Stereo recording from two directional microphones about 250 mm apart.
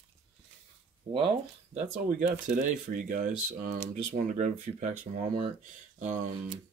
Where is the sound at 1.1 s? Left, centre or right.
Right.